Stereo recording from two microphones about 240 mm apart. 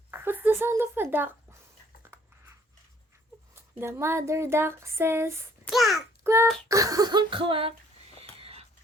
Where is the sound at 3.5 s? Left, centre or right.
Centre.